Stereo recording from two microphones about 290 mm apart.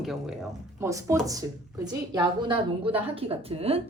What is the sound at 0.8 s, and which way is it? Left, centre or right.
A woman's voice, centre.